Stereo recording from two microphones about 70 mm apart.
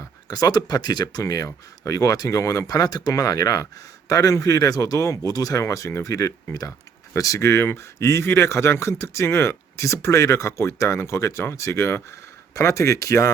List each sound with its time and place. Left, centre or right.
0.3 s speech: left
1.2 s speech: left
5.6 s speech: left